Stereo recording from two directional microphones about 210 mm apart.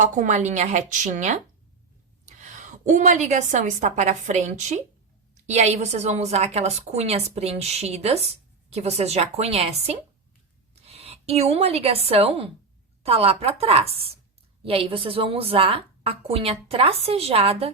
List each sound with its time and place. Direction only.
0.0 s a woman's voice: 35° right (ahead or behind)
10.8 s a woman's voice: 30° right (ahead or behind)